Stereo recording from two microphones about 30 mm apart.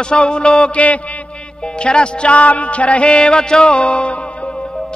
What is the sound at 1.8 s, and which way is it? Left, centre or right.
Music, left.